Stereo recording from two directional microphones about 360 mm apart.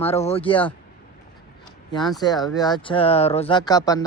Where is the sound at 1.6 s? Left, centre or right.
Centre.